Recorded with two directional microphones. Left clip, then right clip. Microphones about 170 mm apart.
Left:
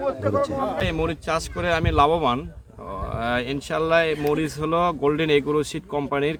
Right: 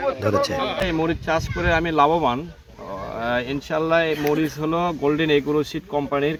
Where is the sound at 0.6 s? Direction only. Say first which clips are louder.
Right 2 dB; 25° left (ahead or behind).